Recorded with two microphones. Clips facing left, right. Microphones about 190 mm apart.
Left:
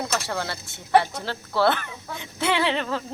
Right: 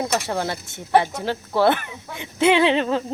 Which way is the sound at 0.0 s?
20° right (ahead or behind).